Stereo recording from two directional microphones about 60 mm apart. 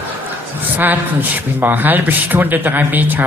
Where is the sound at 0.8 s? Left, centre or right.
Right.